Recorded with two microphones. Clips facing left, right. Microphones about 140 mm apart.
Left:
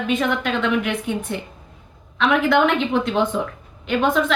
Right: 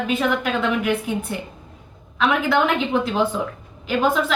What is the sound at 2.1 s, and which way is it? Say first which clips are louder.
A woman's voice: left 2 dB; centre (ahead or behind).